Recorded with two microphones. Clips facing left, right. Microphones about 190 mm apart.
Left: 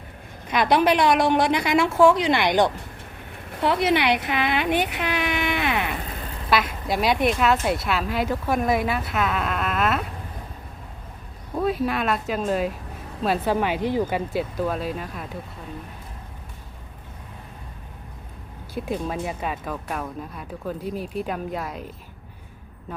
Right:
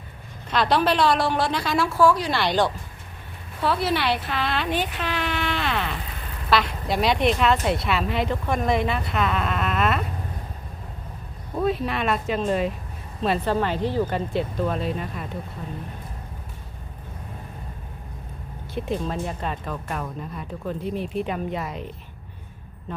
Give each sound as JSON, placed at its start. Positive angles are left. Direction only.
{"t": 0.5, "sound": "a woman's voice", "side_deg": 15}
{"t": 4.9, "sound": "a sound", "side_deg": 15}
{"t": 6.5, "sound": "speech", "side_deg": 5}
{"t": 11.5, "sound": "speech", "side_deg": 0}
{"t": 18.7, "sound": "speech", "side_deg": 5}